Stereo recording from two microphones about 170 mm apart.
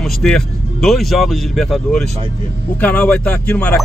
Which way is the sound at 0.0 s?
Centre (ahead or behind).